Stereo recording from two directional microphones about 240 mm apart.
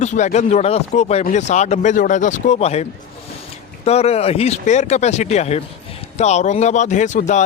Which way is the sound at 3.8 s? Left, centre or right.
Left.